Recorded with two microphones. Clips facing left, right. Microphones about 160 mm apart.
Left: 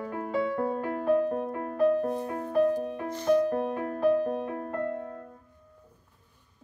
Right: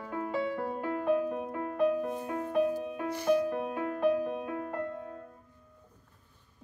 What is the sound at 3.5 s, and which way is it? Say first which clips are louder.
Music: left 3 dB; 40° left (ahead or behind).